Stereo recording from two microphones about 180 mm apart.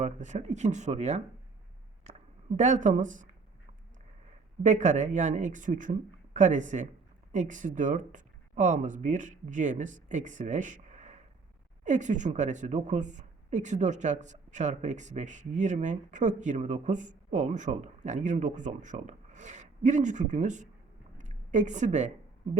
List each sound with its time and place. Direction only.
0.0 s speech: 40° right (ahead or behind)
2.6 s a woman's voice: 40° right (ahead or behind)
4.6 s a woman's voice: 40° right (ahead or behind)
21.2 s a sound: 40° right (ahead or behind)